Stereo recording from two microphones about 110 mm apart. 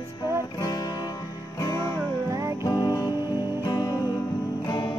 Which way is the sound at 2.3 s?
30° right (ahead or behind).